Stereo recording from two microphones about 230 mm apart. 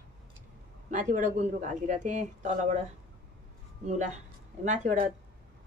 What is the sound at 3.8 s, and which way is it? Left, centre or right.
Speech, right.